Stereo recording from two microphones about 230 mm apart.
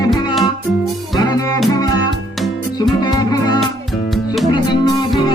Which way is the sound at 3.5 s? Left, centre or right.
Centre.